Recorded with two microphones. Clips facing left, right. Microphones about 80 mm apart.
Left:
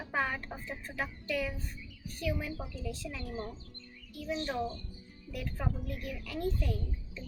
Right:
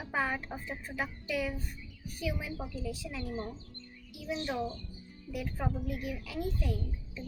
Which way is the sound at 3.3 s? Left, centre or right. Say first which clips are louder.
Right 1 dB; right.